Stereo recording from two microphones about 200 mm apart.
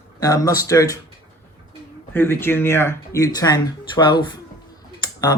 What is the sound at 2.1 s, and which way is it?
Speech, 10° left (ahead or behind).